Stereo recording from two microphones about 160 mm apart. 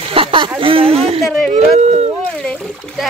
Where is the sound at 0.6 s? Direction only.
35° right (ahead or behind).